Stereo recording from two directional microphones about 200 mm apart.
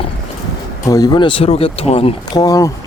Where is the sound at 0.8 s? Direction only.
20° left (ahead or behind).